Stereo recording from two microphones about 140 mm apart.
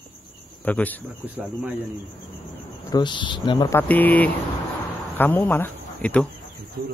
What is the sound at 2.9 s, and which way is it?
Speech, 35° left (ahead or behind).